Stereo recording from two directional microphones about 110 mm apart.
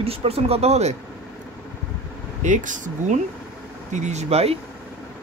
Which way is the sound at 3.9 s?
90° right.